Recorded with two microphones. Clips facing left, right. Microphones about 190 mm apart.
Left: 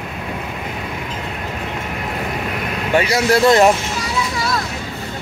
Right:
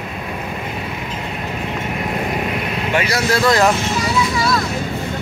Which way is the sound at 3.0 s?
25° left (ahead or behind).